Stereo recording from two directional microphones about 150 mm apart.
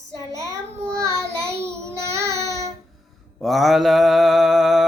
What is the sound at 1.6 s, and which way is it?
Child singing, 20° right (ahead or behind).